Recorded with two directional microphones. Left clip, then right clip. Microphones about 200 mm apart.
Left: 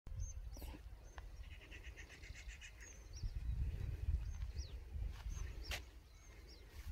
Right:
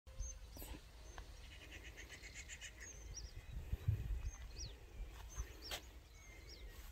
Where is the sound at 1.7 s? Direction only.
5° left (ahead or behind).